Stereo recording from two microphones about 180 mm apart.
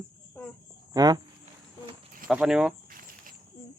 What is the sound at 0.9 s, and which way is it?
Speech, 20° right (ahead or behind).